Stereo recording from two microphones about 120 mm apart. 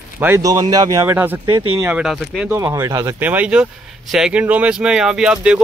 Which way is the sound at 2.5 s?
25° right (ahead or behind).